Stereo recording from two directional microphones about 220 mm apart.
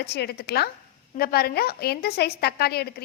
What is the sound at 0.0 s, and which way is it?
A woman's voice, 50° left (ahead or behind).